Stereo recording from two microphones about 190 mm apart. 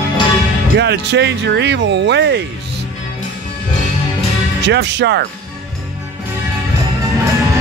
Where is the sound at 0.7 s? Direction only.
60° right (ahead or behind).